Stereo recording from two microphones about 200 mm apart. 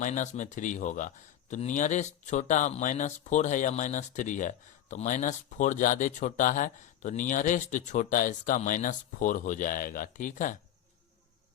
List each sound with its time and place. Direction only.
0.0 s speech: 40° left (ahead or behind)